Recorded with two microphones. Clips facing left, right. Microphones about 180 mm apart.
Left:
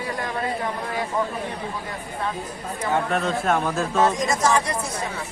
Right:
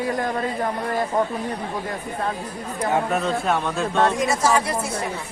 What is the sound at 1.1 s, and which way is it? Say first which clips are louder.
Speech: right 3 dB; 45° right (ahead or behind).